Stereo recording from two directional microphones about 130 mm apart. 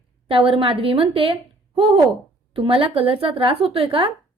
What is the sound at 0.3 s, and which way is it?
A woman's voice, 45° right (ahead or behind).